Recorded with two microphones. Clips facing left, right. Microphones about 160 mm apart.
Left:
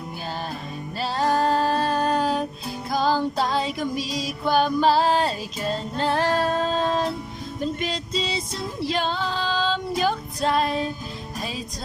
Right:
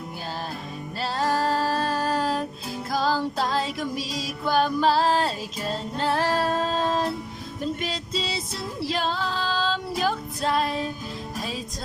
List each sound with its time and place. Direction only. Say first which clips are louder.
0.9 s music: left 3 dB; centre (ahead or behind)